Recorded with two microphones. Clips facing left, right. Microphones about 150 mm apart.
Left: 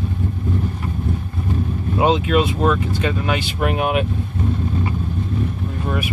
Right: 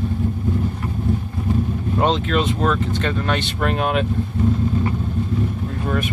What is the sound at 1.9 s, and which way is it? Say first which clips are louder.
Speech: left 3 dB; 5° left (ahead or behind).